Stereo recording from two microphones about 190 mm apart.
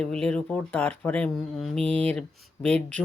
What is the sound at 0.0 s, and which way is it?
Speech, 5° left (ahead or behind).